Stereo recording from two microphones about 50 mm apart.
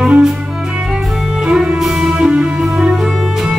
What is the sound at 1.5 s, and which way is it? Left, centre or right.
Music, centre.